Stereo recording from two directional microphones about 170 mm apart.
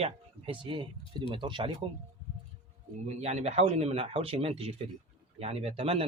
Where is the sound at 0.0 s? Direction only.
30° right (ahead or behind).